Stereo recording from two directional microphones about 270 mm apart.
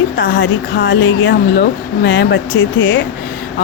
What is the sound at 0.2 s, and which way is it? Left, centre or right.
Speech, left.